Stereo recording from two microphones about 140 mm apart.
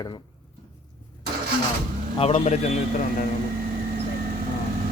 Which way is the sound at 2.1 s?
45° left (ahead or behind).